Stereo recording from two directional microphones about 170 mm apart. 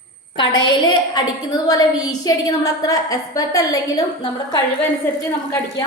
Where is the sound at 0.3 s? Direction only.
25° left (ahead or behind).